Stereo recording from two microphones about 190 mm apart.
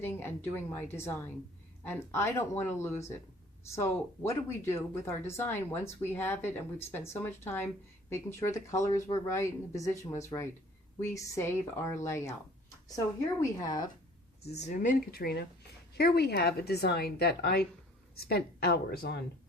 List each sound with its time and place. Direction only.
0.0 s speech: 10° left (ahead or behind)
13.4 s speech: 20° left (ahead or behind)
14.4 s speech: 35° left (ahead or behind); by 19.2 s 55° left (ahead or behind)